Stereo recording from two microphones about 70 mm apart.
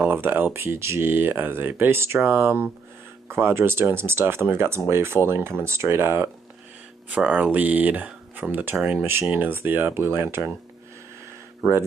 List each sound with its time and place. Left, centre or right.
0.0 s speech: right
7.1 s speech: centre